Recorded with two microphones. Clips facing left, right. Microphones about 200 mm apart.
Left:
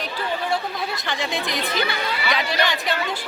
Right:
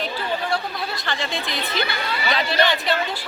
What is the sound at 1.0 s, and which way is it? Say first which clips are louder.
Speech: left 1 dB; 15° left (ahead or behind).